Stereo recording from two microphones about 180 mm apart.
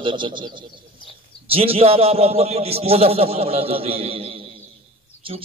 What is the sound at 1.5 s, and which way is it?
A man's voice, 30° right (ahead or behind).